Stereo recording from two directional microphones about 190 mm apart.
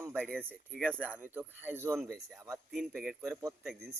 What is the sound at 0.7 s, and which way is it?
Speech, 5° left (ahead or behind).